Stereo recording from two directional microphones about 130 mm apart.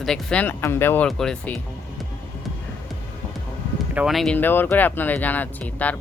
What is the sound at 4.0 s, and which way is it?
Speech, centre (ahead or behind).